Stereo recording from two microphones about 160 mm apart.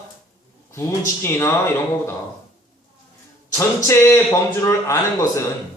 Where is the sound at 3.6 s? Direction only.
20° left (ahead or behind).